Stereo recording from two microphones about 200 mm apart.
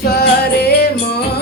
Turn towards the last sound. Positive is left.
turn(degrees=55)  # may be behind; listen again after turning